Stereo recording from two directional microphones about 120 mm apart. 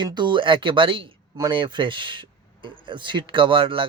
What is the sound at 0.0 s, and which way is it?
A man's voice, 40° right (ahead or behind).